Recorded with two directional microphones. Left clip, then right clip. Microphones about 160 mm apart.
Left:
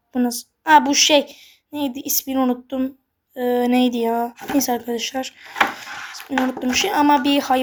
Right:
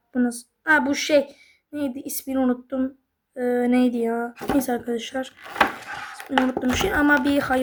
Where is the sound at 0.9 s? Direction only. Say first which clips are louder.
Left 5 dB; 5° right (ahead or behind).